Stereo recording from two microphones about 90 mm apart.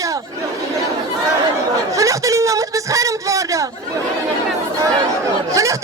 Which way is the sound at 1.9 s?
35° right (ahead or behind).